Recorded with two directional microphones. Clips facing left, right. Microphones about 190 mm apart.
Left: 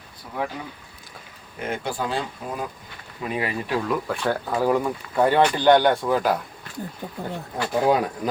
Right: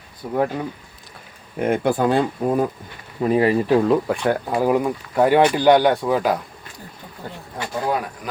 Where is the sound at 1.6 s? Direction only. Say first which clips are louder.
Right 9 dB; 55° right (ahead or behind).